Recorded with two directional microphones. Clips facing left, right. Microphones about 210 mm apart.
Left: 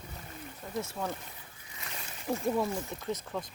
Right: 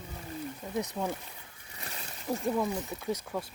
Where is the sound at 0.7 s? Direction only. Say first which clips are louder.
Right 2 dB; 15° right (ahead or behind).